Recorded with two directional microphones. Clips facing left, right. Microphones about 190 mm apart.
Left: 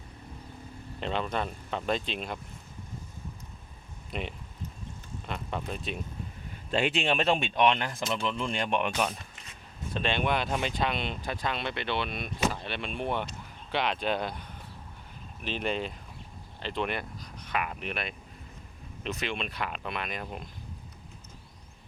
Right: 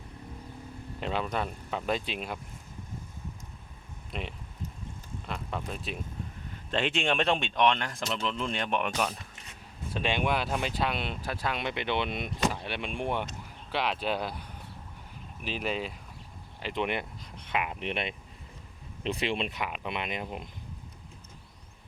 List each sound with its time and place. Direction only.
0.9 s speech: 5° right (ahead or behind)
4.1 s speech: centre (ahead or behind)
9.9 s speech: 10° right (ahead or behind)
15.4 s speech: 5° right (ahead or behind); by 19.5 s 30° right (ahead or behind)
19.5 s speech: 15° right (ahead or behind)